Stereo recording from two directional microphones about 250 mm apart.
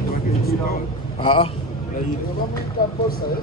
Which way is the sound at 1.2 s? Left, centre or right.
Left.